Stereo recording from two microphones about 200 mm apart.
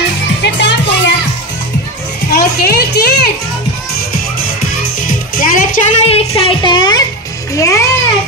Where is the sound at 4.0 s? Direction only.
50° left (ahead or behind); by 7.8 s 15° left (ahead or behind).